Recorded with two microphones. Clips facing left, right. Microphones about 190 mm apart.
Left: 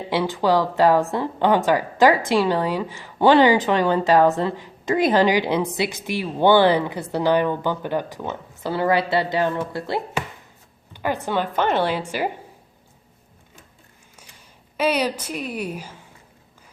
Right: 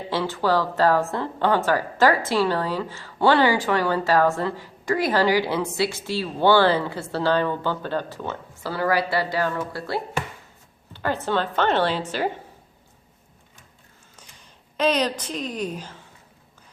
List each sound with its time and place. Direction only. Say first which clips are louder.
0.1 s a woman's voice: left 3 dB; 15° left (ahead or behind)
14.8 s a woman's voice: even; 10° left (ahead or behind)